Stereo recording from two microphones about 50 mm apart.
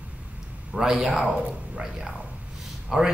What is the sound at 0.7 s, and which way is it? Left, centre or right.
Speech, centre.